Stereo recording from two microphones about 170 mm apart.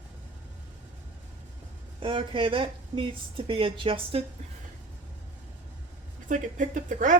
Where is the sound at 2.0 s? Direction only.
30° right (ahead or behind).